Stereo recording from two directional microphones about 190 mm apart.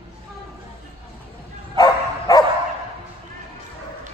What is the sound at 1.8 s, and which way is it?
Bow-wow, 20° left (ahead or behind).